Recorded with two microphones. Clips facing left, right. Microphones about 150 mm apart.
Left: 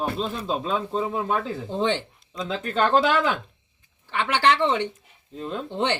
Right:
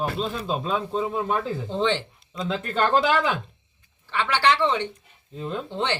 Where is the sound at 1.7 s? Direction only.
15° left (ahead or behind).